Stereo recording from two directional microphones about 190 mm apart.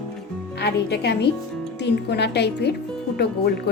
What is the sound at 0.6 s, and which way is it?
A woman's voice, 60° left (ahead or behind).